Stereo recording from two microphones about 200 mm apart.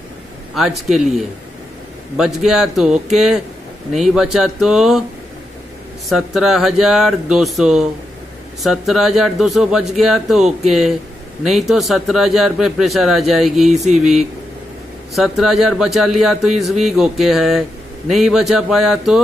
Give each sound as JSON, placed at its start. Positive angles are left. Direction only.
{"t": 2.1, "sound": "a man's voice", "side_deg": -5}
{"t": 6.0, "sound": "a man's voice", "side_deg": 0}
{"t": 13.7, "sound": "a sound", "side_deg": -35}
{"t": 15.1, "sound": "a man's voice", "side_deg": 0}